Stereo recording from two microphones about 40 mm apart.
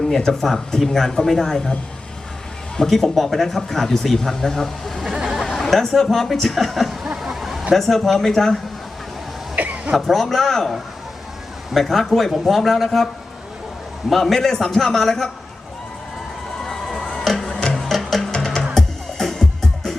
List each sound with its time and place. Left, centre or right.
0.4 s speech: centre
2.7 s speech: centre
5.2 s a sound: centre
5.5 s a sound: centre
5.9 s speech: centre
7.2 s a sound: centre
7.7 s speech: centre
9.6 s cough: right
10.1 s speech: centre
14.1 s speech: centre
16.6 s crowd: centre
17.0 s music: centre
18.3 s music: centre